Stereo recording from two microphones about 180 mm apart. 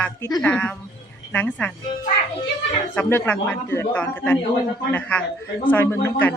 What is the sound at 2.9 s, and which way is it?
A woman's voice, 10° left (ahead or behind).